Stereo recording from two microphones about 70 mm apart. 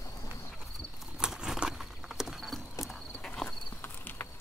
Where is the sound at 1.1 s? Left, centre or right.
Centre.